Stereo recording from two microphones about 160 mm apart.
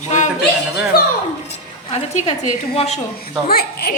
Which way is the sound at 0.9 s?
70° left (ahead or behind).